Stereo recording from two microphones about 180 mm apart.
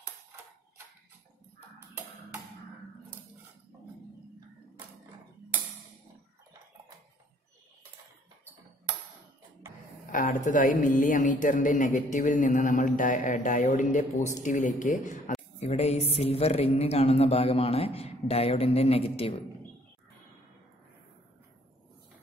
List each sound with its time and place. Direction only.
10.1 s a woman's voice: 45° left (ahead or behind)
15.6 s a man's voice: 35° left (ahead or behind)